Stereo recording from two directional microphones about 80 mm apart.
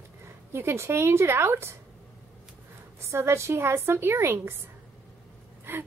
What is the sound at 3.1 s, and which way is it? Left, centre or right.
A woman's voice, right.